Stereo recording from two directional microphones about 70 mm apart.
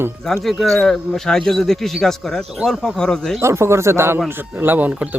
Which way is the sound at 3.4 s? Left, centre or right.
Right.